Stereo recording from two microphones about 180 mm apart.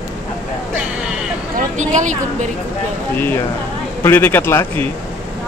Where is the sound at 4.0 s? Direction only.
10° left (ahead or behind).